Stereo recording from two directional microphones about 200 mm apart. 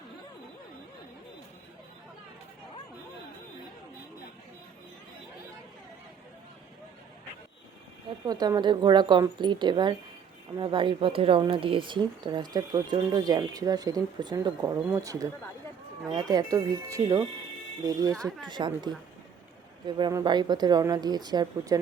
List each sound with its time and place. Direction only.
8.3 s speech: 20° right (ahead or behind)
20.0 s speech: 20° right (ahead or behind)